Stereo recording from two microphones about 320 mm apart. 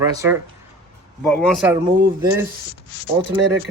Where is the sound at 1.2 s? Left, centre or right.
Centre.